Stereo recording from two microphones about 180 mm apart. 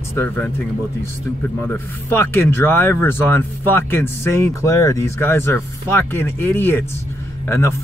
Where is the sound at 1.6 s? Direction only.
10° left (ahead or behind).